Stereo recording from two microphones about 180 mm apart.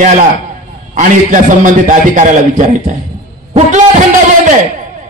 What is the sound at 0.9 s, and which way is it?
A man's voice, 45° right (ahead or behind).